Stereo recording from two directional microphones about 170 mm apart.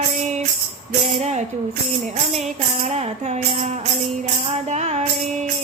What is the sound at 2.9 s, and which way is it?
Music, 40° right (ahead or behind).